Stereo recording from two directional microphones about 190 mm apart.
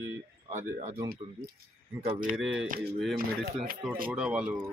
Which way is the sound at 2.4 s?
5° right (ahead or behind).